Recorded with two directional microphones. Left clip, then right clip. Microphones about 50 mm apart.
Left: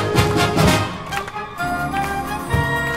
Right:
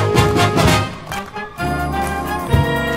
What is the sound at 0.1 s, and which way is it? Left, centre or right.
Music, right.